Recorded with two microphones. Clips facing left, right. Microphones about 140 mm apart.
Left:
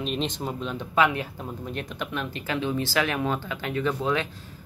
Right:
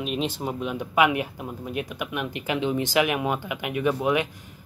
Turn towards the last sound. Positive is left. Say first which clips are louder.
# right 3 dB
turn(degrees=-15)  # may be behind; listen again after turning